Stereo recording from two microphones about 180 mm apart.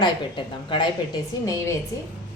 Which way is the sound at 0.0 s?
25° left (ahead or behind).